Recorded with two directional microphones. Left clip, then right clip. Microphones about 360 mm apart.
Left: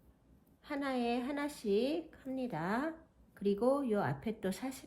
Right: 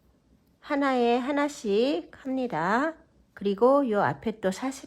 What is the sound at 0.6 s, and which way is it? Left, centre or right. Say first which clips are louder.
Speech: right 12 dB; centre.